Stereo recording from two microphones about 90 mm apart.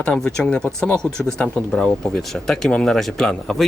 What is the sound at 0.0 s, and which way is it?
Speech, 10° left (ahead or behind).